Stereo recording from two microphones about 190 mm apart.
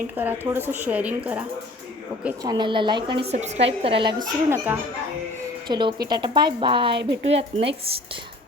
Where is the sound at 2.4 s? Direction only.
20° right (ahead or behind).